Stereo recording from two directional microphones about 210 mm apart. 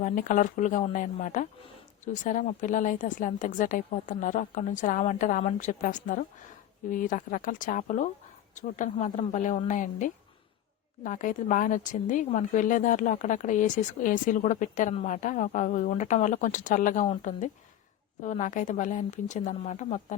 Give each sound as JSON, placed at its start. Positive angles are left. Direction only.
{"t": 0.0, "sound": "speech", "side_deg": 40}